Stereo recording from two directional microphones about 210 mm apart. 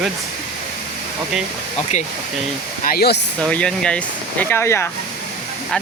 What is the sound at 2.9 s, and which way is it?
Speech, 50° left (ahead or behind).